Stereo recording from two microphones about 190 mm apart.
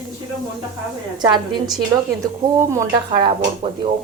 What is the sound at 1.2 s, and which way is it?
A woman's voice, 20° right (ahead or behind).